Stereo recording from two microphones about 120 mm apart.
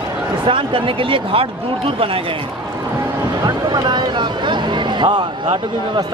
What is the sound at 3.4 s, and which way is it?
Speech, 35° right (ahead or behind).